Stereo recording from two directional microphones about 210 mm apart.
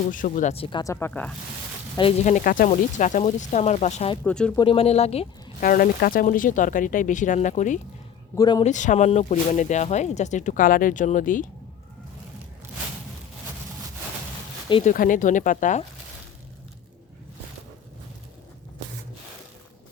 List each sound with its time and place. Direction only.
0.1 s speech: 40° left (ahead or behind); by 1.3 s 10° left (ahead or behind)
2.0 s speech: 30° left (ahead or behind)
4.2 s speech: 5° left (ahead or behind)
4.5 s speech: 25° left (ahead or behind)
5.6 s speech: 45° left (ahead or behind)
8.4 s speech: 20° left (ahead or behind)
8.6 s speech: 35° left (ahead or behind)
14.8 s speech: 40° left (ahead or behind)